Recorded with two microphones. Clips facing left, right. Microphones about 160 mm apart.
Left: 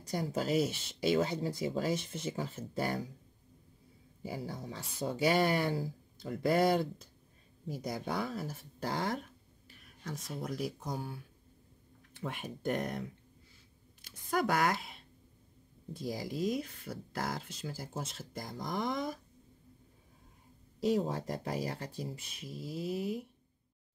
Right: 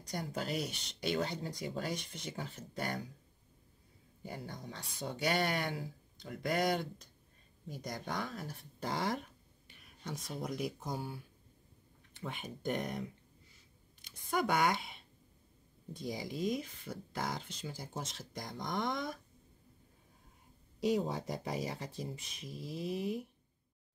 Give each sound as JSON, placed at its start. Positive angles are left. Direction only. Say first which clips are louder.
{"t": 0.1, "sound": "speech", "louder": "left 6 dB", "side_deg": 5}
{"t": 4.2, "sound": "speech", "louder": "left 5 dB", "side_deg": 5}
{"t": 5.7, "sound": "speech", "louder": "left 6 dB", "side_deg": 35}
{"t": 7.6, "sound": "speech", "louder": "left 5 dB", "side_deg": 5}
{"t": 14.3, "sound": "speech", "louder": "left 1 dB", "side_deg": 0}
{"t": 20.8, "sound": "speech", "louder": "left 2 dB", "side_deg": 0}